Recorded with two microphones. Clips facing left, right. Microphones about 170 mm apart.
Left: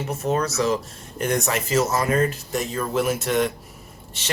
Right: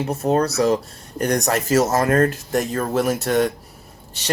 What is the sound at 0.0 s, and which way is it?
Speech, 35° right (ahead or behind).